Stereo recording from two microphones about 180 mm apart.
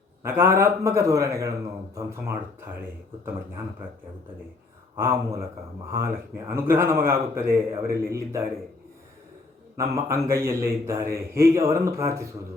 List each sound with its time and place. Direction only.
0.2 s speech: 15° right (ahead or behind)
4.9 s speech: 15° right (ahead or behind)
9.7 s speech: 15° right (ahead or behind)